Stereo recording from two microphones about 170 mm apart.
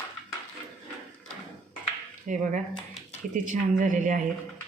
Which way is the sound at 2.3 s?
50° right (ahead or behind).